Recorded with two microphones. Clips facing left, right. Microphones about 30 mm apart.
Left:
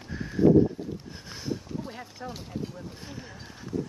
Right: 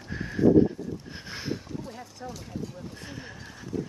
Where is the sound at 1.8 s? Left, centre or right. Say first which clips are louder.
Left 1 dB; left.